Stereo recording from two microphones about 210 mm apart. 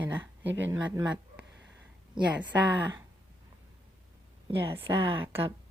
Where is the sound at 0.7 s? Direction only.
10° right (ahead or behind).